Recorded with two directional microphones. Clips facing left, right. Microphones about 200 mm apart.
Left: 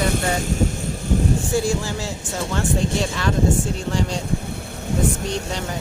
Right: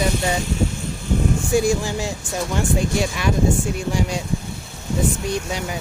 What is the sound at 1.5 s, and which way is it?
Speech, 15° right (ahead or behind).